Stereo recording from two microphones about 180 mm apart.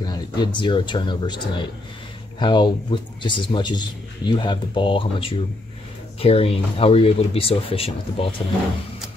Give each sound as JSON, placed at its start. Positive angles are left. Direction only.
{"t": 0.0, "sound": "speech", "side_deg": 25}